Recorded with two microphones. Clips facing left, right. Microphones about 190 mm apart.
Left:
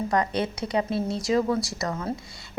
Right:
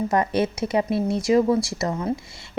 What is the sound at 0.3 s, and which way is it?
Speech, 20° right (ahead or behind).